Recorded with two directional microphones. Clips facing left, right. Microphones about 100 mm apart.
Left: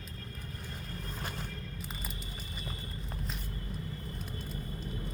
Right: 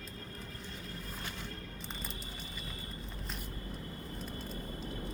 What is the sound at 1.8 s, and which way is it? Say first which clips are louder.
Music: left 1 dB; 5° left (ahead or behind).